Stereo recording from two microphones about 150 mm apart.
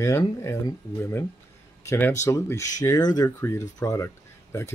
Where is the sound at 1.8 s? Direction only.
20° left (ahead or behind).